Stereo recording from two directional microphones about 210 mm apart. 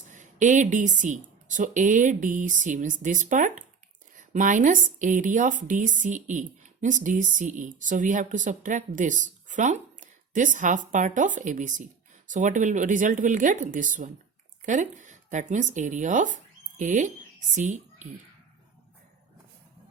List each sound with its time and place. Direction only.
0.1 s a woman's voice: 35° right (ahead or behind)